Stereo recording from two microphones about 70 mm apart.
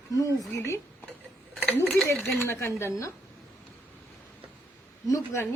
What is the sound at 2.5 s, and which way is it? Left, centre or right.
Speech, left.